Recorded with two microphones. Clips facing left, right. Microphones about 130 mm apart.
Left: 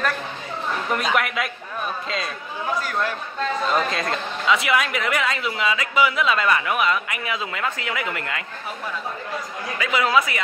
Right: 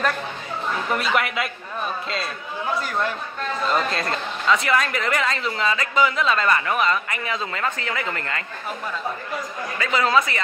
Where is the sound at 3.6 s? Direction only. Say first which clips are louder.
Right 2 dB; centre (ahead or behind).